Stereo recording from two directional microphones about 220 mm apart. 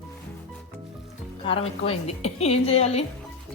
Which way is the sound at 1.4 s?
25° left (ahead or behind).